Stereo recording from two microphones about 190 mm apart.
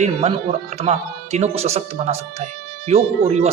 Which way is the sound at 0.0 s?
30° right (ahead or behind).